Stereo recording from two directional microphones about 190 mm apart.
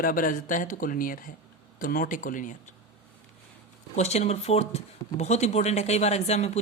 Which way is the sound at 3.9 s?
35° left (ahead or behind).